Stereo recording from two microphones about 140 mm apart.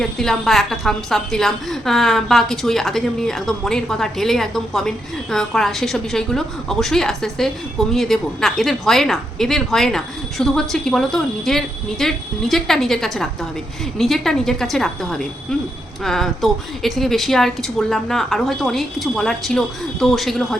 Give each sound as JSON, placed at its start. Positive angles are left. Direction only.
{"t": 0.0, "sound": "a woman's voice", "side_deg": 5}